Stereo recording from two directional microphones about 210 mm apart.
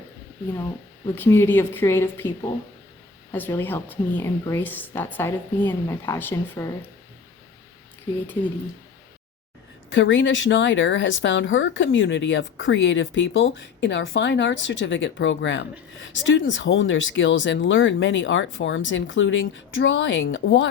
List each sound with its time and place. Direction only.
1.1 s a woman's voice: 10° left (ahead or behind)
9.9 s speech: 65° left (ahead or behind)